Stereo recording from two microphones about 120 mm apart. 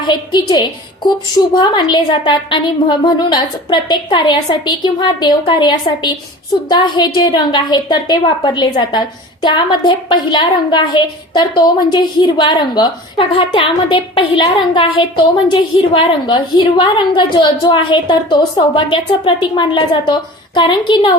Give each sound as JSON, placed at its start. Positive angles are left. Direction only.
{"t": 0.0, "sound": "a woman's voice", "side_deg": 40}
{"t": 13.1, "sound": "a woman's voice", "side_deg": 50}